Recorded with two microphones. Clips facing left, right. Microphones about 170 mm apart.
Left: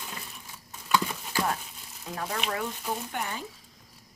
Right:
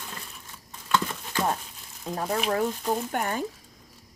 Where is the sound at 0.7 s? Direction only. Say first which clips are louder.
Even; 10° left (ahead or behind).